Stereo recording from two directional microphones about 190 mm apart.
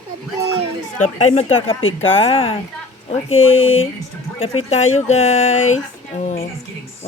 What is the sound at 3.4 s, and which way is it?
Speech, 90° left.